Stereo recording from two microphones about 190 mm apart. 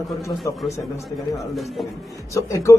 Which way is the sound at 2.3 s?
15° left (ahead or behind).